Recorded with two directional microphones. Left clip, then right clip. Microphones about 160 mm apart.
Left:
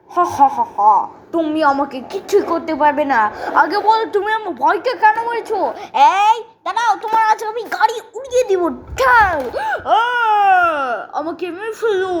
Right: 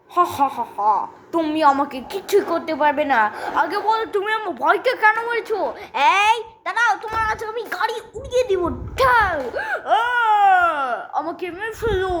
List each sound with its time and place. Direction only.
0.2 s speech: 5° right (ahead or behind)
1.3 s a woman's voice: 30° right (ahead or behind)
1.5 s a woman's voice: 15° right (ahead or behind)
3.5 s a woman's voice: 15° left (ahead or behind); by 5.6 s 10° right (ahead or behind)
5.6 s speech: 5° left (ahead or behind)
6.1 s a woman's voice: 10° right (ahead or behind)
7.0 s a woman's voice: 10° left (ahead or behind)